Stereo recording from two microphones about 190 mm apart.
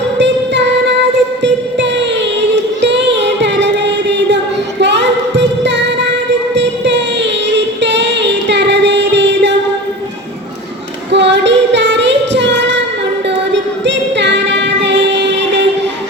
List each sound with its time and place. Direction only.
0.2 s music: 65° right (ahead or behind)
4.8 s a sound: 65° right (ahead or behind)
11.1 s female singing: 65° right (ahead or behind)
13.2 s music: 70° right (ahead or behind)